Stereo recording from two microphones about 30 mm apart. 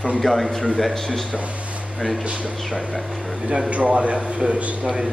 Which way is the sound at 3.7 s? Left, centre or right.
Right.